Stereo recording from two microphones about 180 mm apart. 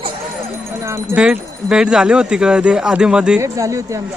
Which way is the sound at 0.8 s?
15° right (ahead or behind).